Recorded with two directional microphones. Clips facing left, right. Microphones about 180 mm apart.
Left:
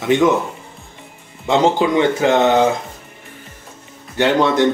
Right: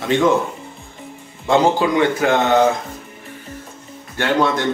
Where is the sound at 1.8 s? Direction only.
20° left (ahead or behind).